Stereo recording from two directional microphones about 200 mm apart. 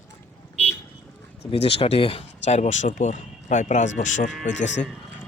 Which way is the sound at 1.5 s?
30° left (ahead or behind).